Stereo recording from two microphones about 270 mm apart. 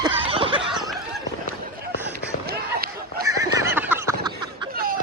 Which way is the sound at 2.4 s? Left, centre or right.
Right.